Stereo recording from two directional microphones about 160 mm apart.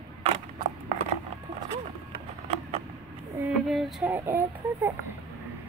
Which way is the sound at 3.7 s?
Centre (ahead or behind).